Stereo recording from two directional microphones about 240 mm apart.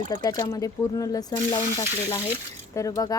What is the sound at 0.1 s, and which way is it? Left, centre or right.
Speech, centre.